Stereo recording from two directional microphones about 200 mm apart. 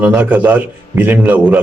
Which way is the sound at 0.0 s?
5° right (ahead or behind).